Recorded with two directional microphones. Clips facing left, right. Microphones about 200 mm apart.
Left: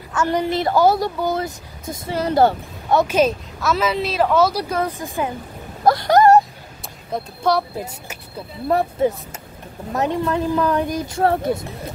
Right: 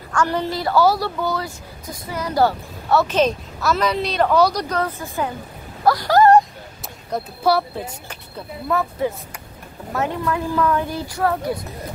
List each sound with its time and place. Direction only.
0.1 s a woman's voice: 20° left (ahead or behind)
7.1 s speech: centre (ahead or behind)
9.9 s a woman's voice: 20° left (ahead or behind)